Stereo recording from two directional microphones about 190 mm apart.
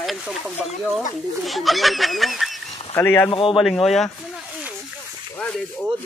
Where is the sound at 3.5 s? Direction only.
Centre (ahead or behind).